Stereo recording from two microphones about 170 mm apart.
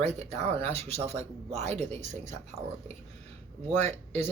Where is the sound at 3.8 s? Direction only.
40° right (ahead or behind).